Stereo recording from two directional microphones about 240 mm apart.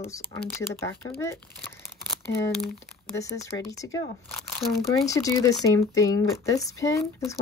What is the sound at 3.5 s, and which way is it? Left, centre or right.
Speech, centre.